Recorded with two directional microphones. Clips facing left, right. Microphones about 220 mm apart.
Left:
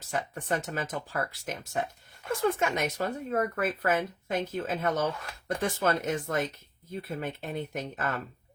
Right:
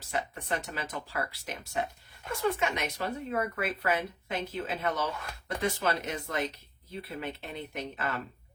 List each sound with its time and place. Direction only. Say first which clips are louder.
0.1 s speech: left 2 dB; 45° left (ahead or behind)